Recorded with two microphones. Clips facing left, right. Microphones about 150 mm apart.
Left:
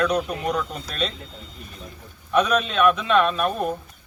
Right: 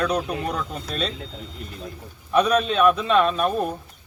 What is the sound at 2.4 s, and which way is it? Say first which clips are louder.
Speech: right 4 dB; 35° right (ahead or behind).